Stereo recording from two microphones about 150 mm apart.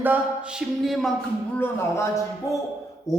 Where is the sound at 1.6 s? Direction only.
15° left (ahead or behind).